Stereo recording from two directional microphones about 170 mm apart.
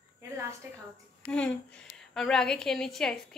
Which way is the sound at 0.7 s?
10° right (ahead or behind).